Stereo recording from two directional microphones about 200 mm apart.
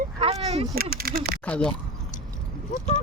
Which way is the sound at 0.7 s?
50° right (ahead or behind).